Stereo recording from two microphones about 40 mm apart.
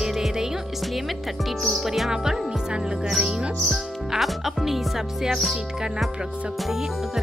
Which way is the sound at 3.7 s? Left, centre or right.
Centre.